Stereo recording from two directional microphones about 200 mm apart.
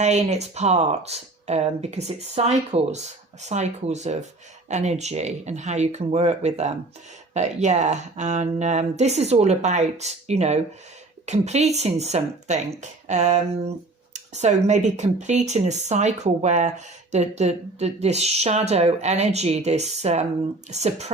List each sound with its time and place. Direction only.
0.0 s speech: 35° right (ahead or behind)